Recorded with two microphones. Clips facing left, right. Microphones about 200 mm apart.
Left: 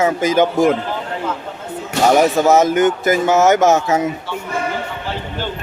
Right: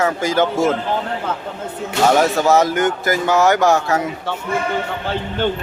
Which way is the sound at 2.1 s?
20° left (ahead or behind).